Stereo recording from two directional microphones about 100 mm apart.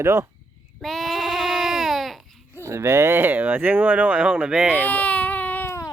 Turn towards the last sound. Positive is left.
turn(degrees=20)  # may be behind; listen again after turning